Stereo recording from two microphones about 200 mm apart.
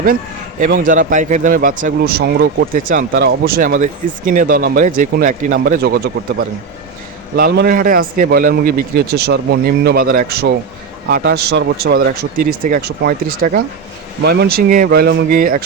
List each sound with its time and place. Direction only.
0.7 s a man's voice: 40° right (ahead or behind)
2.7 s a man's voice: 40° right (ahead or behind)
7.3 s a man's voice: 50° right (ahead or behind)